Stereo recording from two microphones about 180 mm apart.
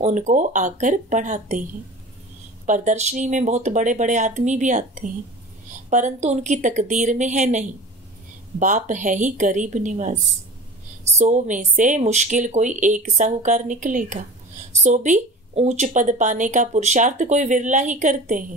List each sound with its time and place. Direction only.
0.0 s speech: 40° right (ahead or behind)
2.6 s speech: 40° right (ahead or behind)
11.1 s speech: 40° right (ahead or behind)